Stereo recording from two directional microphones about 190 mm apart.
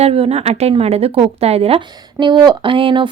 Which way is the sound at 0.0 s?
30° right (ahead or behind).